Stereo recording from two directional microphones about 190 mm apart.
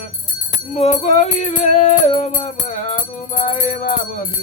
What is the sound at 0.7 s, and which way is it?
Music, 35° left (ahead or behind).